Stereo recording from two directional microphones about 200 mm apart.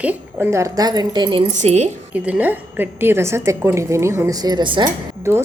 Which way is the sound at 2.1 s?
5° right (ahead or behind).